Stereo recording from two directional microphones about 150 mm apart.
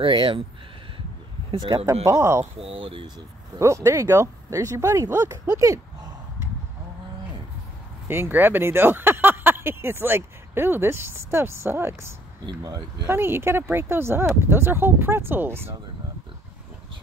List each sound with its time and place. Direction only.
0.0 s speech: 35° right (ahead or behind)
1.5 s speech: 35° right (ahead or behind)
2.0 s speech: 20° right (ahead or behind)
2.6 s speech: 35° right (ahead or behind)
3.5 s speech: 20° right (ahead or behind)
8.1 s speech: 15° right (ahead or behind)
12.4 s speech: 25° right (ahead or behind)
13.0 s speech: 15° right (ahead or behind)